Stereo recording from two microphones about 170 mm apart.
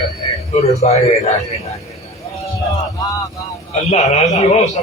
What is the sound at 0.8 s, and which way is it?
Speech, 40° left (ahead or behind).